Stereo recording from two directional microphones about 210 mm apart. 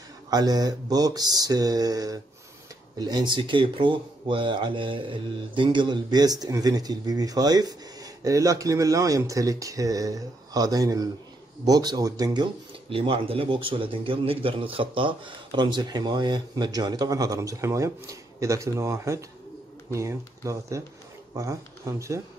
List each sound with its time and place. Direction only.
0.3 s a man's voice: 20° right (ahead or behind)